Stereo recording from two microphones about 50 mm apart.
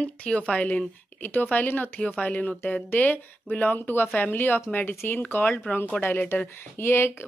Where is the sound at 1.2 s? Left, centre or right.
Left.